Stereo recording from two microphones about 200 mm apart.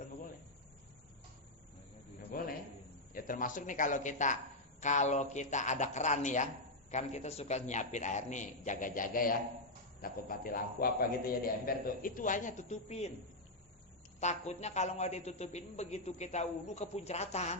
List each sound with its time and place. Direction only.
2.3 s a sound: 45° left (ahead or behind)
3.2 s a woman's voice: 40° left (ahead or behind)
14.2 s a woman's voice: 35° left (ahead or behind)